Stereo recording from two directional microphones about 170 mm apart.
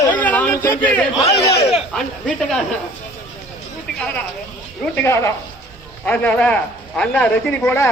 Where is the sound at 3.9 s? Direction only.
5° left (ahead or behind).